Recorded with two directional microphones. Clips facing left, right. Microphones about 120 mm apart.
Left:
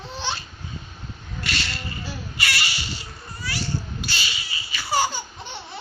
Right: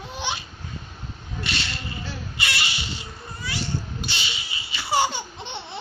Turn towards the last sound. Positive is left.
turn(degrees=-25)  # may be behind; listen again after turning